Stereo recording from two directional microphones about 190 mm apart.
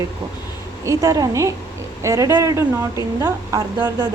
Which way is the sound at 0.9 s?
20° right (ahead or behind).